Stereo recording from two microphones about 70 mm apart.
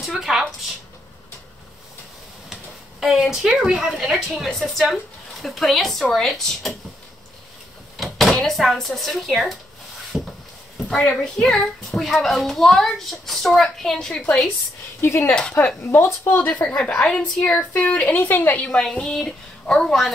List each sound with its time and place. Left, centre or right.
0.0 s a sound: centre
2.5 s a sound: centre
3.2 s speech: centre
3.5 s speech: centre
8.0 s speech: centre
10.1 s a sound: centre
10.9 s a woman's voice: centre
15.0 s speech: left
16.3 s a woman's voice: left
18.7 s a woman's voice: centre